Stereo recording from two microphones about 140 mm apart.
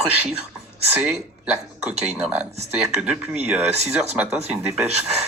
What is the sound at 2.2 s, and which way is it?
Speech, 5° right (ahead or behind).